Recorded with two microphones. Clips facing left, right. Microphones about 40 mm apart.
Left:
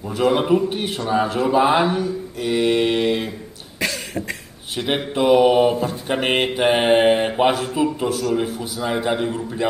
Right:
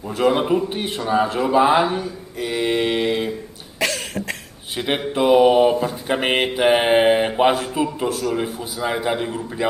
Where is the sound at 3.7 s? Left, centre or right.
Right.